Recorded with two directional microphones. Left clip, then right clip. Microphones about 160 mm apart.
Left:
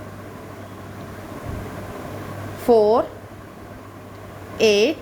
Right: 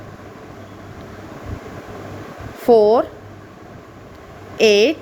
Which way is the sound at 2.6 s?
30° right (ahead or behind).